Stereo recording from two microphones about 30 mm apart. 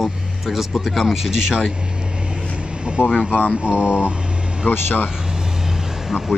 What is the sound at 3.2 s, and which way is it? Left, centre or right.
Speech, right.